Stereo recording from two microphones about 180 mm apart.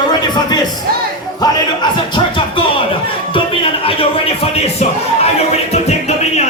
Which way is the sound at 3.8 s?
30° left (ahead or behind).